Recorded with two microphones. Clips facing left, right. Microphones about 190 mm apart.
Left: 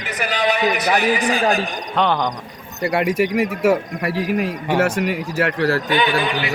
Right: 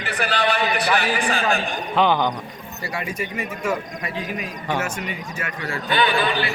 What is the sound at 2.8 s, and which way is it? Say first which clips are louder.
Speech: left 11 dB; 60° left (ahead or behind).